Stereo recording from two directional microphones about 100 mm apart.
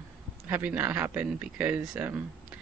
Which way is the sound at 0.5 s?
15° right (ahead or behind).